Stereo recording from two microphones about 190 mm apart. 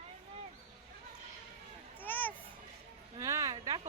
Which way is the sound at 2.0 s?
10° left (ahead or behind).